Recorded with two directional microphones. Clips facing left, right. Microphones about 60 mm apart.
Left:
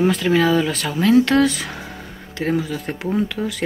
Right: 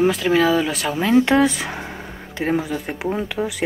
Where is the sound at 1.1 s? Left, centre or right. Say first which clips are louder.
Right 1 dB; right.